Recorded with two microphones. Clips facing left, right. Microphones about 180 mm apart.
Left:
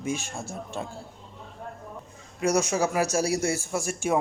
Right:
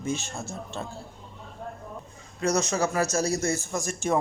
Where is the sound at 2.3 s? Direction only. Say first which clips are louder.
Left 1 dB; 10° left (ahead or behind).